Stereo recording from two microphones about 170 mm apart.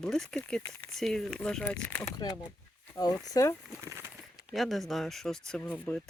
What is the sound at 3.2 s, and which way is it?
Speech, 20° left (ahead or behind).